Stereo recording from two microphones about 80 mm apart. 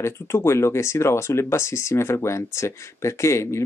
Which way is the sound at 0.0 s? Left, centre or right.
Left.